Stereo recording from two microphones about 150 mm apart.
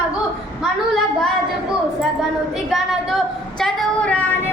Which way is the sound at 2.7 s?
Centre (ahead or behind).